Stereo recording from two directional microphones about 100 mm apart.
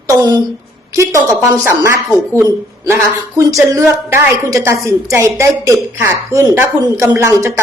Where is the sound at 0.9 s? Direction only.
30° right (ahead or behind).